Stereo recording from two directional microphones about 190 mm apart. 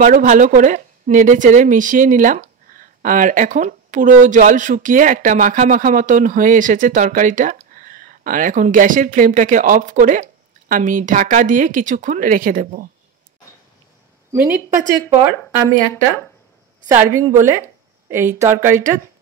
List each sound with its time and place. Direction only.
0.0 s speech: 45° right (ahead or behind)
14.3 s a woman's voice: 10° right (ahead or behind)
16.8 s a woman's voice: 10° right (ahead or behind)
18.7 s a woman's voice: 40° right (ahead or behind)